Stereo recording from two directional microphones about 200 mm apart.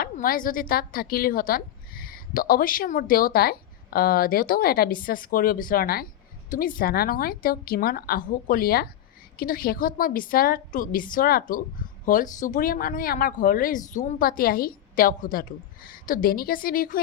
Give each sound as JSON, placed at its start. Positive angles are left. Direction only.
{"t": 0.0, "sound": "speech", "side_deg": 45}